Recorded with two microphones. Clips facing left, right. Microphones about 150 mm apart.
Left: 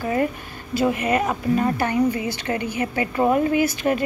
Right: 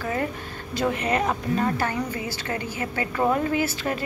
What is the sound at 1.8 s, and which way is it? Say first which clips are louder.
A woman's voice: left 6 dB; 20° left (ahead or behind).